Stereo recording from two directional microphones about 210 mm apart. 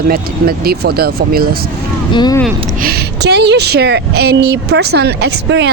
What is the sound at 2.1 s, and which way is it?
Speech, 20° left (ahead or behind).